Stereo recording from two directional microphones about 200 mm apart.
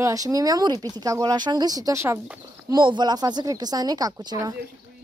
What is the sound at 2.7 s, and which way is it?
Speech, 25° right (ahead or behind).